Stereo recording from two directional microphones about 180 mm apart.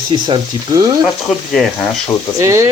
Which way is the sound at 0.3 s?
20° right (ahead or behind).